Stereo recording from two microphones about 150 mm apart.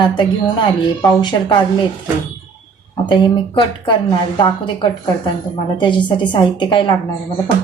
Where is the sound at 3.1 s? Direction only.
30° left (ahead or behind).